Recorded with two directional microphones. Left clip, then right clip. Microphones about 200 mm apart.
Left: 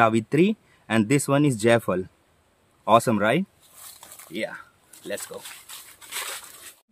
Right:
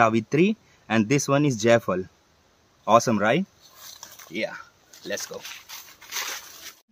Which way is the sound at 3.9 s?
Centre (ahead or behind).